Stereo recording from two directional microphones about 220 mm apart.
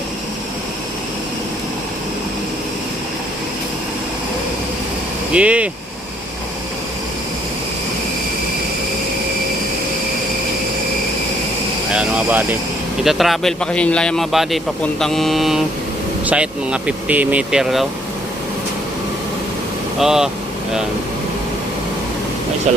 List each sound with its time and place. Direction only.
5.3 s speech: 5° right (ahead or behind)
11.9 s vehicle: 5° right (ahead or behind)
13.0 s speech: centre (ahead or behind)
20.0 s speech: centre (ahead or behind)